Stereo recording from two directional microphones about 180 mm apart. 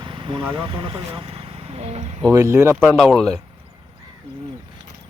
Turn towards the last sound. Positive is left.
turn(degrees=0)  # may be behind; listen again after turning